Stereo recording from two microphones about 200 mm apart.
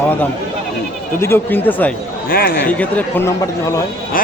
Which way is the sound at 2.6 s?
5° left (ahead or behind).